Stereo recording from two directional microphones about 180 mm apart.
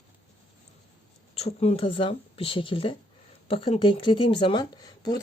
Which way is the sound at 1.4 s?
35° left (ahead or behind).